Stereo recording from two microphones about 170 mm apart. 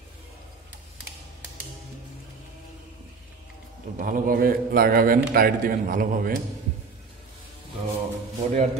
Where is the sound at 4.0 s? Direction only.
55° right (ahead or behind).